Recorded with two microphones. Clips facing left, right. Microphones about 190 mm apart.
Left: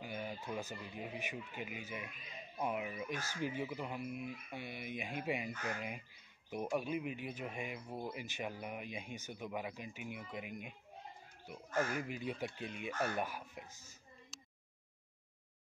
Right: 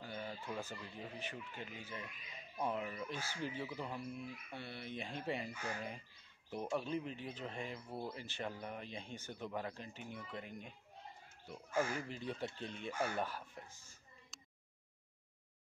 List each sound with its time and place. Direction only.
0.0 s speech: 15° left (ahead or behind)
11.9 s speech: 10° left (ahead or behind)
13.7 s speech: 40° left (ahead or behind)